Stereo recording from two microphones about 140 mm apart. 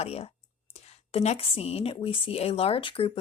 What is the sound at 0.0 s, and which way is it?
Speech, 50° left (ahead or behind).